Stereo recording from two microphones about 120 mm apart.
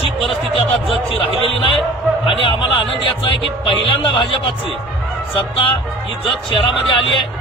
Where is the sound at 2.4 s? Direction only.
50° left (ahead or behind).